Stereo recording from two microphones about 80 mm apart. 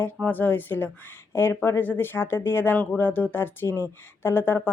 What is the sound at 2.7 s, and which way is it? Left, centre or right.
Speech, centre.